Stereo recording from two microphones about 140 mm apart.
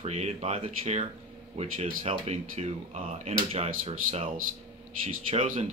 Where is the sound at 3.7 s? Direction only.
65° right (ahead or behind).